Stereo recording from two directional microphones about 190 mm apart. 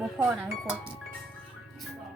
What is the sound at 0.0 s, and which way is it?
Speech, centre (ahead or behind).